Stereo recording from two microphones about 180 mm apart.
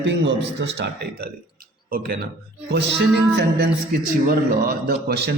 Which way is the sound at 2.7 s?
70° right (ahead or behind).